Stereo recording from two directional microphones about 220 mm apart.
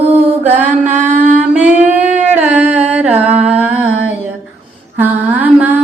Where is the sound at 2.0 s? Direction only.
30° right (ahead or behind).